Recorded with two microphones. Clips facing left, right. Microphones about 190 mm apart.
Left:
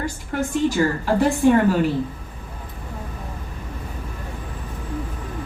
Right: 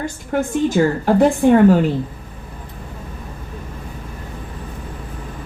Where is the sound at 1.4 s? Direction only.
60° right (ahead or behind).